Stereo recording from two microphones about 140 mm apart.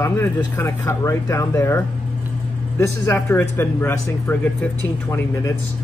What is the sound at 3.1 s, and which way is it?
Speech, 20° left (ahead or behind).